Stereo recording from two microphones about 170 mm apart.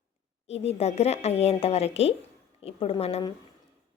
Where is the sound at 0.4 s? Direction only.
35° left (ahead or behind).